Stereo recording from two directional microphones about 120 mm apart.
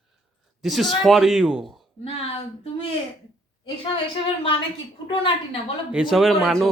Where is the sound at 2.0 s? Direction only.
55° left (ahead or behind).